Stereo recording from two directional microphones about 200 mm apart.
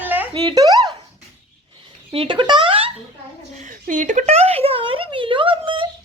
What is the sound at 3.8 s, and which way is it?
A child's voice, 40° right (ahead or behind).